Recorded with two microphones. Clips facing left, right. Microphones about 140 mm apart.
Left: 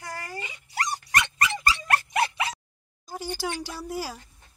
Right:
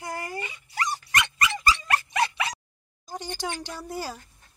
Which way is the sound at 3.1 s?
5° left (ahead or behind).